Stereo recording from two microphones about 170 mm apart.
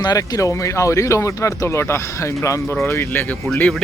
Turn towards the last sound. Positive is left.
turn(degrees=5)  # may be behind; listen again after turning